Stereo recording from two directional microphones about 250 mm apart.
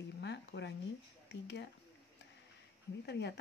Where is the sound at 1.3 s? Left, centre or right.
Left.